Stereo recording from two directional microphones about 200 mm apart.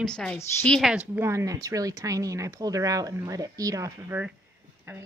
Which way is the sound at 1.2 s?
15° right (ahead or behind).